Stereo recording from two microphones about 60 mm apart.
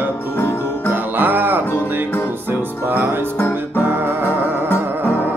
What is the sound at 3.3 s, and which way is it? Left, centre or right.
Music, left.